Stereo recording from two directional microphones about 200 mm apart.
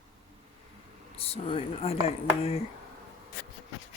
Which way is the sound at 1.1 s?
30° left (ahead or behind).